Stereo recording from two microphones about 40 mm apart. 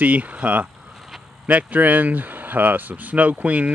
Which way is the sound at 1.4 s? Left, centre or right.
Right.